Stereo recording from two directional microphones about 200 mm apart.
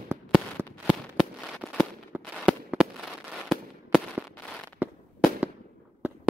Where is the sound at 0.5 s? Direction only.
5° left (ahead or behind).